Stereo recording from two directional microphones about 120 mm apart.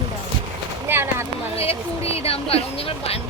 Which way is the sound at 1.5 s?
55° left (ahead or behind).